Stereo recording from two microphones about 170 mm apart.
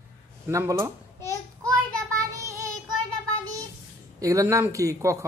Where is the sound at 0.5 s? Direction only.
15° right (ahead or behind).